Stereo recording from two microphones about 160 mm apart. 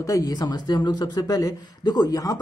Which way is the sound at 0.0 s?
20° left (ahead or behind).